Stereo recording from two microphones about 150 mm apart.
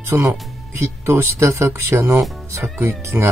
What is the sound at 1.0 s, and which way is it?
Speech, 20° right (ahead or behind).